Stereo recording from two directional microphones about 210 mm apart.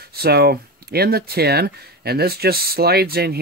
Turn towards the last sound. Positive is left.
turn(degrees=-50)  # may be behind; listen again after turning